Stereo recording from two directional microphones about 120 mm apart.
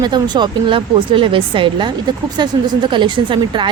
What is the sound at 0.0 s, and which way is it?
A woman's voice, 40° right (ahead or behind).